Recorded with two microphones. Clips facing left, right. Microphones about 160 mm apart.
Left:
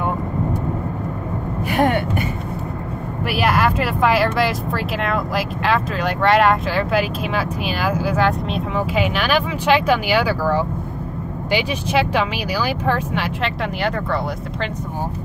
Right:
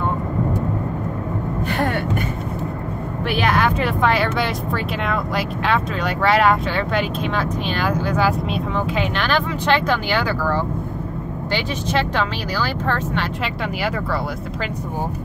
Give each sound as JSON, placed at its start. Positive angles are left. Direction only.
{"t": 1.7, "sound": "a sound", "side_deg": 15}
{"t": 3.3, "sound": "speech", "side_deg": 5}
{"t": 13.4, "sound": "speech", "side_deg": -5}